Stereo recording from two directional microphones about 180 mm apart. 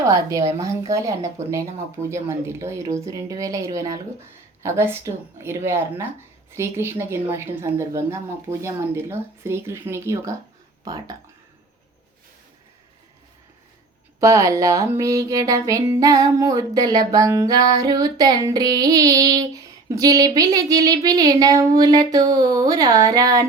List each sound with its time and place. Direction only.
0.0 s a woman's voice: 20° right (ahead or behind)
10.8 s music: 20° right (ahead or behind)
14.2 s music: 15° right (ahead or behind)